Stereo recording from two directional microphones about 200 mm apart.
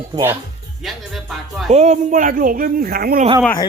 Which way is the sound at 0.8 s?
Centre (ahead or behind).